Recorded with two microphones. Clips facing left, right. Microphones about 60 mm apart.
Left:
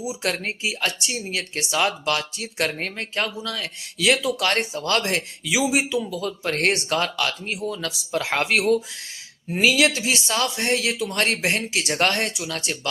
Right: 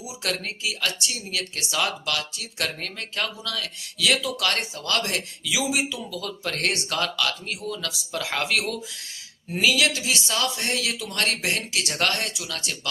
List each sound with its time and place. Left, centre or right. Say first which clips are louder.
0.0 s speech: left 8 dB; centre
0.3 s speech: left 1 dB; left